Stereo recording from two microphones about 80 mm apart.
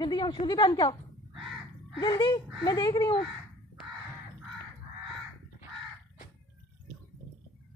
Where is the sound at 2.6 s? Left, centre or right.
Left.